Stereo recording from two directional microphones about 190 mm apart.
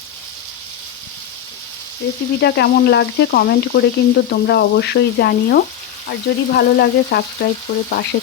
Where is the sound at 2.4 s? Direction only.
60° left (ahead or behind).